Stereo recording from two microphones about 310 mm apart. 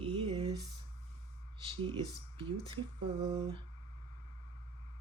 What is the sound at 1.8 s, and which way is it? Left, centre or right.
Speech, centre.